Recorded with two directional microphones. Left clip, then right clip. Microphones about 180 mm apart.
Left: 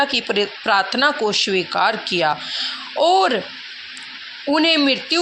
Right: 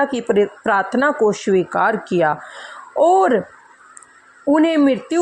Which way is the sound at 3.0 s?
15° right (ahead or behind).